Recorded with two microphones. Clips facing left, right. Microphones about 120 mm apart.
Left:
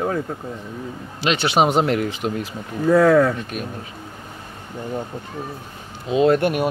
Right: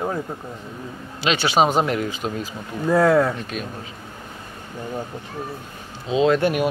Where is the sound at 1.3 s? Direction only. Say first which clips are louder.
Left 1 dB; 60° left (ahead or behind).